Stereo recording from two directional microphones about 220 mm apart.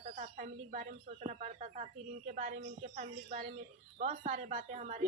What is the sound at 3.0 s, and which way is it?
Speech, 35° right (ahead or behind).